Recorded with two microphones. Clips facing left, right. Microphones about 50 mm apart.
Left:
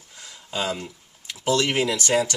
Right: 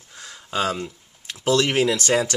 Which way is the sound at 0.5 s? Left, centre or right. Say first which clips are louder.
Right 4 dB; right.